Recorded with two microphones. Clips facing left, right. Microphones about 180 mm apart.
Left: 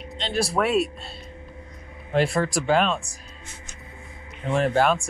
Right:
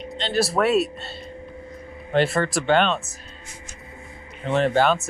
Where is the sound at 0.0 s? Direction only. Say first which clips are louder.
Right 3 dB; centre (ahead or behind).